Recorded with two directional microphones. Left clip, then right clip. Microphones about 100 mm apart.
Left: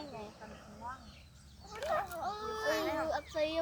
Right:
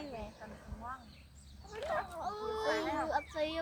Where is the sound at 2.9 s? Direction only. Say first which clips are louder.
Right 1 dB; 35° right (ahead or behind).